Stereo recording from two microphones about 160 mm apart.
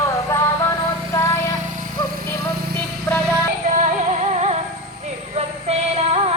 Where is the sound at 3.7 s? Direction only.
50° right (ahead or behind).